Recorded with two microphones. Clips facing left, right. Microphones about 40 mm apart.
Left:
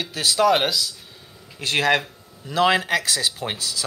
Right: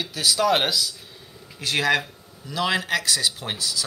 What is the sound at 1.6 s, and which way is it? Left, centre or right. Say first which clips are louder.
Speech: left 2 dB; left.